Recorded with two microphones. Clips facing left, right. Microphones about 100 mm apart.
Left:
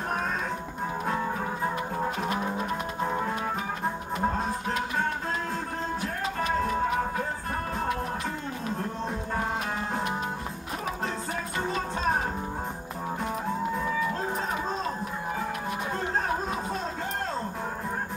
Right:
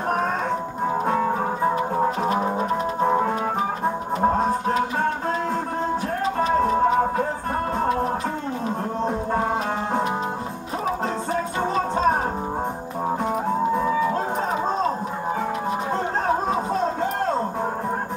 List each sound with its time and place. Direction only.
1.0 s music: 45° right (ahead or behind)
6.2 s music: 35° right (ahead or behind)
11.6 s music: 35° right (ahead or behind)
13.2 s music: 40° right (ahead or behind)
15.9 s music: 30° right (ahead or behind)